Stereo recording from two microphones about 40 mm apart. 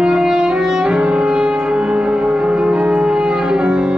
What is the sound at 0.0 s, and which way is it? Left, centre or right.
Music, centre.